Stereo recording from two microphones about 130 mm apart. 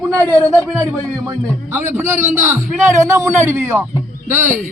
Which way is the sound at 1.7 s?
20° right (ahead or behind).